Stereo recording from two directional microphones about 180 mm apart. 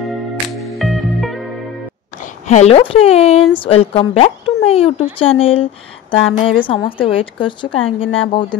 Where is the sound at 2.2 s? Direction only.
40° left (ahead or behind).